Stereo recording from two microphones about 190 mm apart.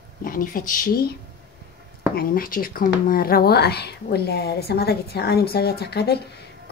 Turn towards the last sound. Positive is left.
turn(degrees=60)  # may be behind; listen again after turning